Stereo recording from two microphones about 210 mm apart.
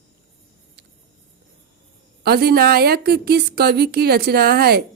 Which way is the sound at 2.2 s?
50° right (ahead or behind).